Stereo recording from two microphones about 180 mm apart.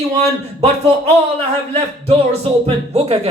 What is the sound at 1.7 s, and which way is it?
A man's voice, 35° right (ahead or behind).